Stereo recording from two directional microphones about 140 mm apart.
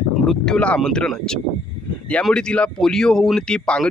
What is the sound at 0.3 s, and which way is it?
Speech, 5° left (ahead or behind).